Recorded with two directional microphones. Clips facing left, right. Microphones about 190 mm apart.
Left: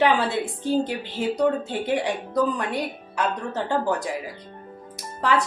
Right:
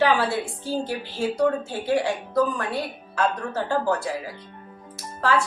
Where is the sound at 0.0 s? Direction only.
20° left (ahead or behind).